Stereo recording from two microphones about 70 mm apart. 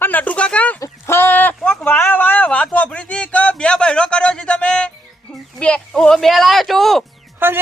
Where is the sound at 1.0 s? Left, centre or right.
Left; by 7.1 s centre.